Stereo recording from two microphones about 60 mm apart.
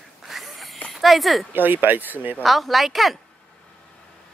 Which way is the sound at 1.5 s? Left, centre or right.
Right.